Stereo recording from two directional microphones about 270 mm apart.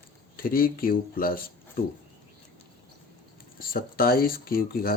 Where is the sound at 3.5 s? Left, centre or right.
Left.